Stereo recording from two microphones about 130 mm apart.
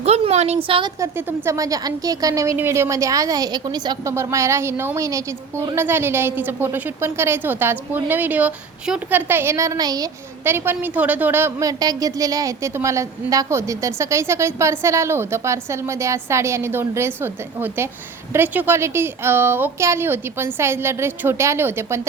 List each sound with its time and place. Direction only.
0.0 s a woman's voice: 55° right (ahead or behind)
0.9 s a woman's voice: 20° right (ahead or behind)
4.1 s a woman's voice: 20° right (ahead or behind)
10.4 s a woman's voice: 15° right (ahead or behind)
11.8 s a woman's voice: 30° right (ahead or behind)